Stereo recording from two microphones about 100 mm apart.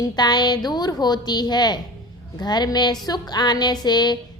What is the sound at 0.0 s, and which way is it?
A woman's voice, 45° left (ahead or behind).